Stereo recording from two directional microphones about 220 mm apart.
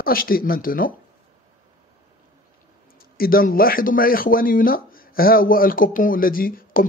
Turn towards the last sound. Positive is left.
turn(degrees=40)  # may be behind; listen again after turning